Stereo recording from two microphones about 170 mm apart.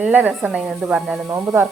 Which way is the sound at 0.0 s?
10° right (ahead or behind).